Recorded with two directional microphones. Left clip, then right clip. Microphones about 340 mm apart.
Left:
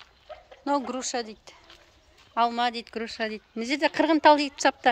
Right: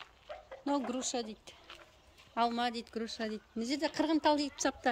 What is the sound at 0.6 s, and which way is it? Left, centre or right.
A woman's voice, centre.